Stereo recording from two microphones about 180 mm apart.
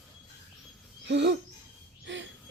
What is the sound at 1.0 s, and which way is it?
Owl, 70° right (ahead or behind).